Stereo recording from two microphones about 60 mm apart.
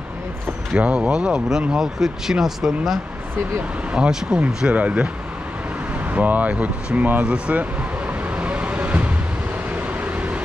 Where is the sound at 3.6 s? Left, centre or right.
Centre.